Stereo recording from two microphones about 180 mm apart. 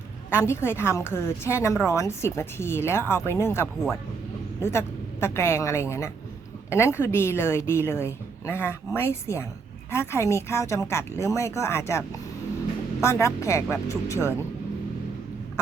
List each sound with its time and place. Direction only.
0.3 s a woman's voice: 15° left (ahead or behind)